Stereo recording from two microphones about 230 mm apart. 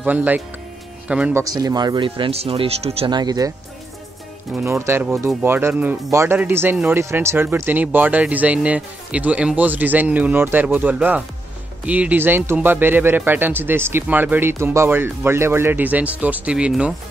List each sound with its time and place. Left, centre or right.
0.0 s speech: centre
4.6 s speech: centre